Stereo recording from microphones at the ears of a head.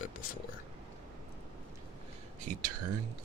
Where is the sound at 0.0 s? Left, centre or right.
Left.